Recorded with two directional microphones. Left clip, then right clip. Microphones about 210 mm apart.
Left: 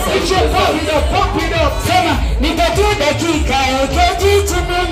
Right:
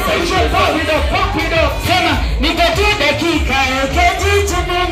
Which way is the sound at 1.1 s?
60° left (ahead or behind).